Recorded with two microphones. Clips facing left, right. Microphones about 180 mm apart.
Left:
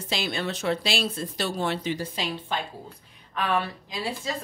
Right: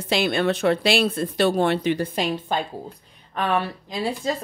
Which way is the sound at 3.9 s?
35° right (ahead or behind).